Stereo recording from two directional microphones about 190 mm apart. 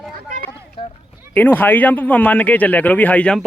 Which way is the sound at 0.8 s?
30° left (ahead or behind).